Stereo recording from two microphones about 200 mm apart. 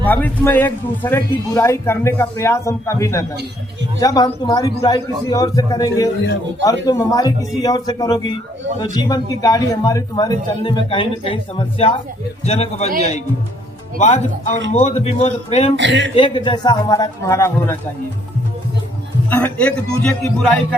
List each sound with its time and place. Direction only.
0.0 s a man's voice: 10° left (ahead or behind); by 15.7 s 30° left (ahead or behind)
15.7 s speech: 65° right (ahead or behind)
16.1 s a man's voice: 25° left (ahead or behind)
19.3 s speech: 5° left (ahead or behind)